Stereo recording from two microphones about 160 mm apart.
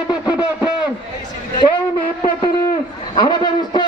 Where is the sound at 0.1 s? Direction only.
25° left (ahead or behind).